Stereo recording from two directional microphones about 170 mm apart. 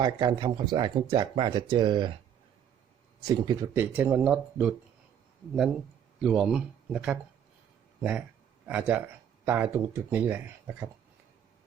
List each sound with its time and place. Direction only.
0.0 s speech: 25° right (ahead or behind)
3.2 s speech: 25° right (ahead or behind)
3.8 s speech: 10° right (ahead or behind)
6.1 s speech: 5° right (ahead or behind)
8.6 s speech: 10° right (ahead or behind)